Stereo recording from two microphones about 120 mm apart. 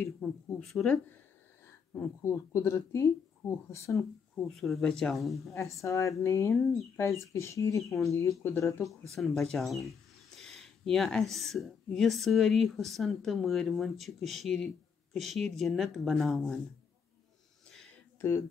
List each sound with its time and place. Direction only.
0.2 s speech: 5° left (ahead or behind)
2.0 s speech: 20° left (ahead or behind)
4.4 s speech: centre (ahead or behind)
5.6 s speech: 25° left (ahead or behind)
9.1 s speech: 5° left (ahead or behind)
18.2 s speech: 20° left (ahead or behind)